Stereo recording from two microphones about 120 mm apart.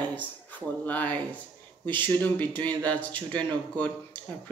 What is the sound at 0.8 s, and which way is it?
Speech, 10° left (ahead or behind).